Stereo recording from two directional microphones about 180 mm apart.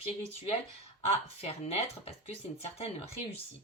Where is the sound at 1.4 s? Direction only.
35° left (ahead or behind).